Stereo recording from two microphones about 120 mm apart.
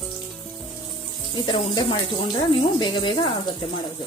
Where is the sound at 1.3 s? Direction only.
40° left (ahead or behind).